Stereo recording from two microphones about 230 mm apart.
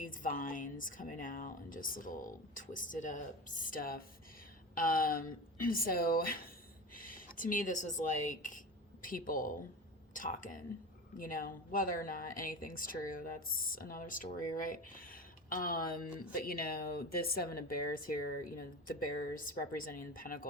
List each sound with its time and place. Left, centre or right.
0.0 s speech: left